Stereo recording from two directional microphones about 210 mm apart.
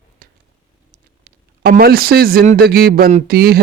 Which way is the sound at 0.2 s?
45° right (ahead or behind).